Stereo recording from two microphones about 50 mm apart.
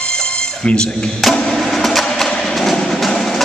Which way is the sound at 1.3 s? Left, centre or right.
Centre.